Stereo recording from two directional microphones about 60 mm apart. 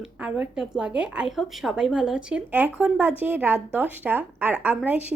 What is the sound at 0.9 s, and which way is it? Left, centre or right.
Speech, centre.